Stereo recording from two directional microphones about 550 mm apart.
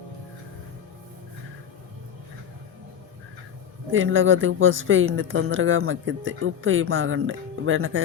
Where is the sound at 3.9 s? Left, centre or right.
Right.